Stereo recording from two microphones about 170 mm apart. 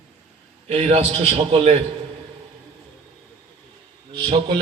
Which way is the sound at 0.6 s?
40° right (ahead or behind).